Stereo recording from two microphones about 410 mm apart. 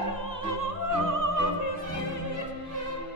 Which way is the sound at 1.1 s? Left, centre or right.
Right.